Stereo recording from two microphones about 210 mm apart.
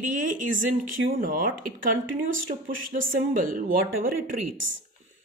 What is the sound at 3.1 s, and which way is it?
Speech, 40° right (ahead or behind).